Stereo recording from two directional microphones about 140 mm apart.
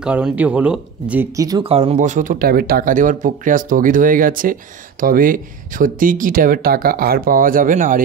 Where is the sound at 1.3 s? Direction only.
25° right (ahead or behind).